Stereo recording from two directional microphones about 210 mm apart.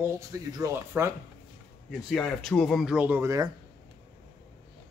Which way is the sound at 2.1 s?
Centre (ahead or behind).